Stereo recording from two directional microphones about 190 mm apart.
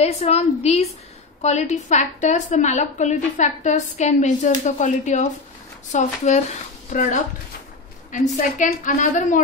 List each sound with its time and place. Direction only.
0.0 s a woman's voice: 35° left (ahead or behind)